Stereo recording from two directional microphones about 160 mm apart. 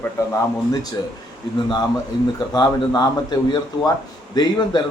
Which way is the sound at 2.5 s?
25° left (ahead or behind).